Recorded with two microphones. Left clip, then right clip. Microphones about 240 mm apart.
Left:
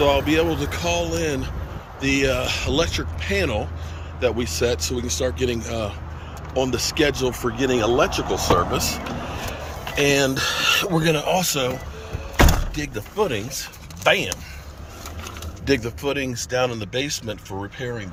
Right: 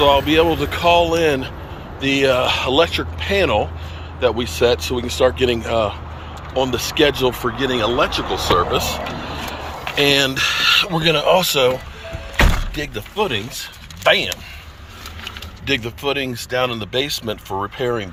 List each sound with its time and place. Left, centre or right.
0.0 s speech: centre
9.9 s speech: centre
11.1 s speech: centre
12.9 s speech: centre
15.6 s speech: left
17.8 s speech: right